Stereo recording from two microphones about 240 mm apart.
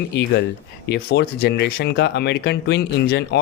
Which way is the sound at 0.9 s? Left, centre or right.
Left.